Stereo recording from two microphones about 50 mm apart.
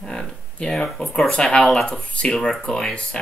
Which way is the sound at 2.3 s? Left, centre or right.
Centre.